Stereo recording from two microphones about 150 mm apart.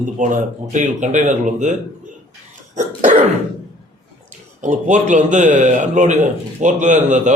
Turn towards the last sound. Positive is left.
turn(degrees=-55)  # may be behind; listen again after turning